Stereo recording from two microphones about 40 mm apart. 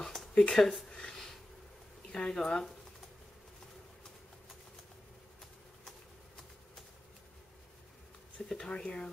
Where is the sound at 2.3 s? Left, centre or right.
Centre.